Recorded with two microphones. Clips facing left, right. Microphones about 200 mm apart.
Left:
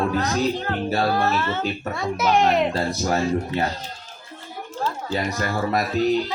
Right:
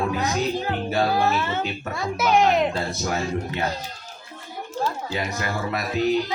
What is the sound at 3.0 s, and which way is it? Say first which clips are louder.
Speech: left 5 dB; 35° left (ahead or behind).